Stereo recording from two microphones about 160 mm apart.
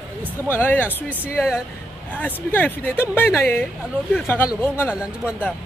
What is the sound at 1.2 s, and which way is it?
Speech, 5° right (ahead or behind).